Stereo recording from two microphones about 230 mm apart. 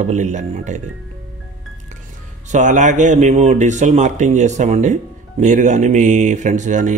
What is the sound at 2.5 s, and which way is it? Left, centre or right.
Speech, right.